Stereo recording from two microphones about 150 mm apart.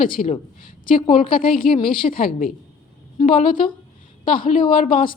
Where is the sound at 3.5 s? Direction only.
35° left (ahead or behind).